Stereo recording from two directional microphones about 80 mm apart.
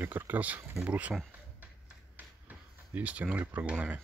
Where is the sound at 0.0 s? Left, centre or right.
Right.